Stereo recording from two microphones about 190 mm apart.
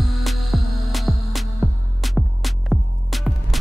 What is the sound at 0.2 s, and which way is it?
Music, centre (ahead or behind).